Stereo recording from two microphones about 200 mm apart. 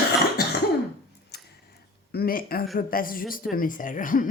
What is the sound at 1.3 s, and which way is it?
Tick-tock, 55° left (ahead or behind).